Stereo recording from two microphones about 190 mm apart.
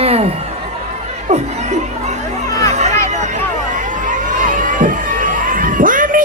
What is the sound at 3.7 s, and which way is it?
Crowd, 40° right (ahead or behind).